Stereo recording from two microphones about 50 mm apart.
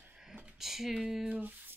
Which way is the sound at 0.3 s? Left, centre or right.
Centre.